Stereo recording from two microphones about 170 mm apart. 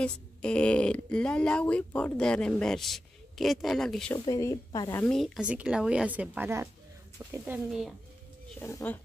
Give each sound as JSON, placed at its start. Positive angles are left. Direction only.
{"t": 0.0, "sound": "speech", "side_deg": 5}
{"t": 4.1, "sound": "speech", "side_deg": 15}
{"t": 5.1, "sound": "a woman's voice", "side_deg": 0}
{"t": 8.5, "sound": "speech", "side_deg": 10}